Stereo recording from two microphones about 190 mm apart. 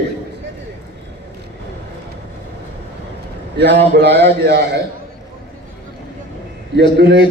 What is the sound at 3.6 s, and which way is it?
A man's voice, 65° right (ahead or behind).